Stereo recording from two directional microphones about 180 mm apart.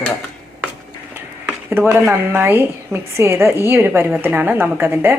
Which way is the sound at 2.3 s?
10° right (ahead or behind).